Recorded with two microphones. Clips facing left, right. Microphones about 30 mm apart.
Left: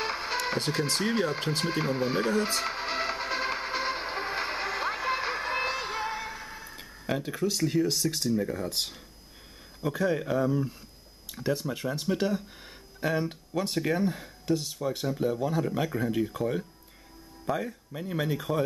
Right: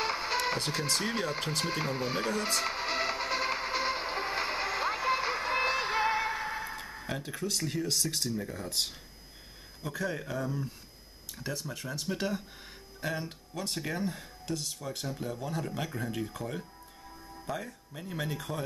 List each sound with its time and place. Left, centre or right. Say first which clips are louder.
0.0 s music: even; centre; by 6.8 s right
7.1 s speech: left 7 dB; centre
12.2 s speech: left 5 dB; centre
13.0 s speech: left 7 dB; centre